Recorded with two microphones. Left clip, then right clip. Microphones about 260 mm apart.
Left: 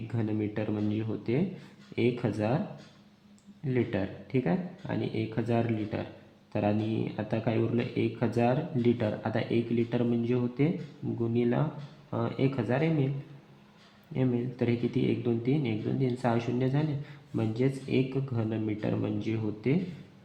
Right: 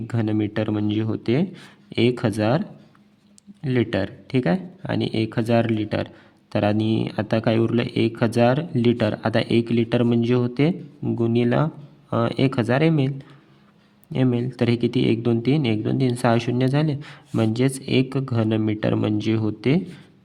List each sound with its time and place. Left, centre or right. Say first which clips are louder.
0.1 s speech: right 9 dB; right
3.6 s speech: right 8 dB; right
14.1 s speech: right 8 dB; right